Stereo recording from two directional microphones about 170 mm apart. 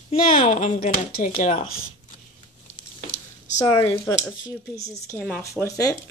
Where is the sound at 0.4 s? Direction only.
45° left (ahead or behind).